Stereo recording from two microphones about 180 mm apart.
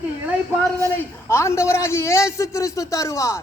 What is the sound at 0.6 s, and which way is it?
A man's voice, 10° left (ahead or behind).